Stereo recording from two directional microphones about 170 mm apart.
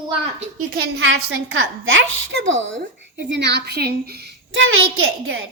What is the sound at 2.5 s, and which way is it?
A woman's voice, 90° right.